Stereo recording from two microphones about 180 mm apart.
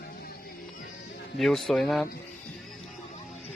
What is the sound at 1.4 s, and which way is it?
Speech, centre (ahead or behind).